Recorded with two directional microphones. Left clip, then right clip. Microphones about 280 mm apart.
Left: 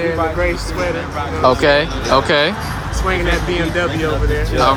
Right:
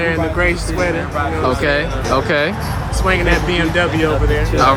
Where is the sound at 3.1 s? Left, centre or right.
Right.